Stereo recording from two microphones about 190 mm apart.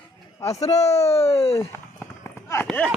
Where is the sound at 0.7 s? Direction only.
35° left (ahead or behind).